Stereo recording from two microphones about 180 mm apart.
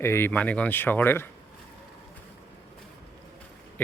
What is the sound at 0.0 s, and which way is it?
Speech, 15° left (ahead or behind).